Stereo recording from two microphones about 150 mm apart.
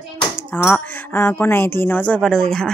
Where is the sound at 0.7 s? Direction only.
15° left (ahead or behind).